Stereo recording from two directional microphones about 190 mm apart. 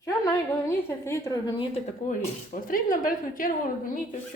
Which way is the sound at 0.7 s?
15° left (ahead or behind).